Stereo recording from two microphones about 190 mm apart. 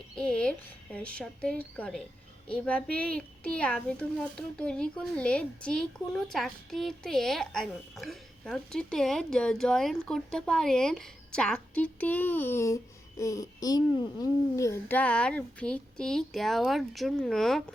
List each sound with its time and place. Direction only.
0.2 s a child's voice: 5° left (ahead or behind)